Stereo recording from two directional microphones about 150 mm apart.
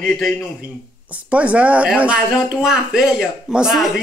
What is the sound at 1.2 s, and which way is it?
Speech, 10° right (ahead or behind).